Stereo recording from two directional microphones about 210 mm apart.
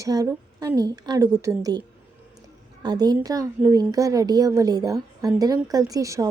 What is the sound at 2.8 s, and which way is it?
A woman's voice, 20° right (ahead or behind).